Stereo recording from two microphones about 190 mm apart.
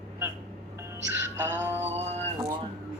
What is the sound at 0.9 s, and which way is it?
Music, 15° right (ahead or behind).